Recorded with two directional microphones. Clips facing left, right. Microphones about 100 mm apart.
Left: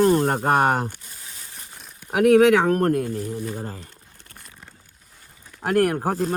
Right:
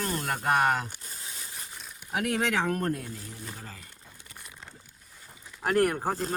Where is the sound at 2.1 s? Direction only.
65° left (ahead or behind).